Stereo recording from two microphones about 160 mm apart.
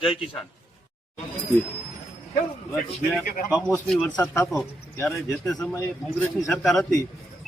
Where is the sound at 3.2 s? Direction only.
55° left (ahead or behind).